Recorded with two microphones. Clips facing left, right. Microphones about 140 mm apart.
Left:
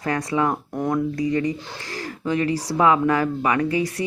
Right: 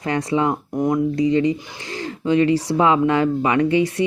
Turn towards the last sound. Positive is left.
turn(degrees=-25)  # may be behind; listen again after turning